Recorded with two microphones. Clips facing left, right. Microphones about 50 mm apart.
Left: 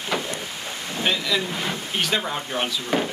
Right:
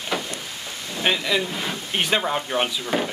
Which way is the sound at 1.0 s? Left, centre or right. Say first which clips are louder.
Right 2 dB; centre.